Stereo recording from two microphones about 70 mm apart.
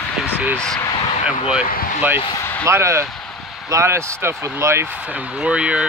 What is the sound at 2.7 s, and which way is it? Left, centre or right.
Speech, right.